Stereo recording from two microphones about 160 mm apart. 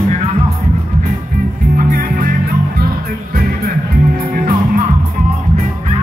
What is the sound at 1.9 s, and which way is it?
Music, 65° right (ahead or behind).